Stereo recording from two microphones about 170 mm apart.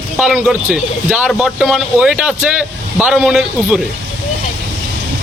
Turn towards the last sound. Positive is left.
turn(degrees=-5)  # may be behind; listen again after turning